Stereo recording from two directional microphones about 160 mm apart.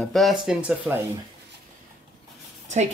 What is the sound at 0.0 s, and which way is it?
Speech, centre (ahead or behind).